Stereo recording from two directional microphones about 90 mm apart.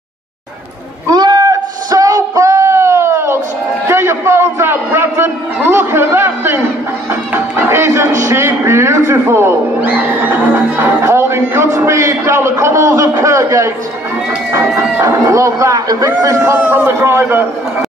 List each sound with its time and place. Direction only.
1.1 s a sound: 45° right (ahead or behind)
14.8 s speech: 35° right (ahead or behind)
16.6 s a man's voice: 25° right (ahead or behind)